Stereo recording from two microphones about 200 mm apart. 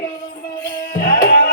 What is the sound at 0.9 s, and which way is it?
Tabla, 45° left (ahead or behind).